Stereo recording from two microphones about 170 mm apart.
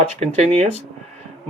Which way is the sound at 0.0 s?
40° right (ahead or behind).